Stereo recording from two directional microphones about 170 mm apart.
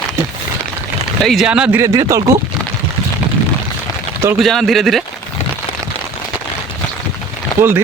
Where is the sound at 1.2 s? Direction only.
Centre (ahead or behind).